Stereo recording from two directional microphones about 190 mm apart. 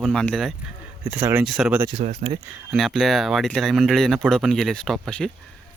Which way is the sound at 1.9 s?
40° right (ahead or behind).